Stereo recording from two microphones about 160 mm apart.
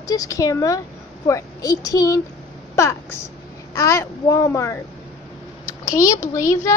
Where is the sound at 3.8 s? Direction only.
20° left (ahead or behind).